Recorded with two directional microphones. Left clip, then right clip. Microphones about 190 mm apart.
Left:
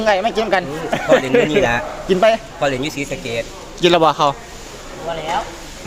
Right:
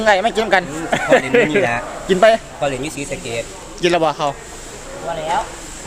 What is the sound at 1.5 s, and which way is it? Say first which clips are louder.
Speech: left 1 dB; 65° left (ahead or behind).